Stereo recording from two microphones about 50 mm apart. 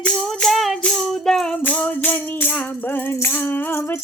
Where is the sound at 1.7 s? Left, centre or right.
Left.